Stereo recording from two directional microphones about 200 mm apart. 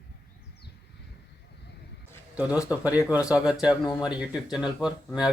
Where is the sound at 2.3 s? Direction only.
5° right (ahead or behind).